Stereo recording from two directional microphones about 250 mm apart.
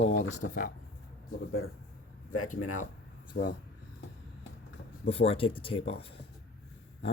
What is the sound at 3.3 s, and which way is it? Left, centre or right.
Speech, left.